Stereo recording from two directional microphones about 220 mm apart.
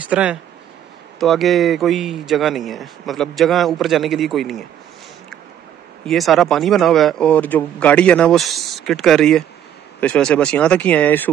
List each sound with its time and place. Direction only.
0.0 s speech: 5° right (ahead or behind)
6.0 s speech: centre (ahead or behind)